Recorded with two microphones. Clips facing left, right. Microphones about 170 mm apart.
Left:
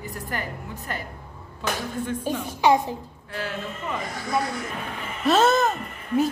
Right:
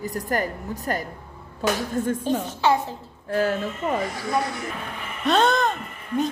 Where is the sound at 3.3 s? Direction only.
45° right (ahead or behind).